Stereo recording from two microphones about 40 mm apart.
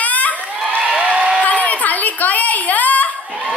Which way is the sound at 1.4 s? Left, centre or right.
Left.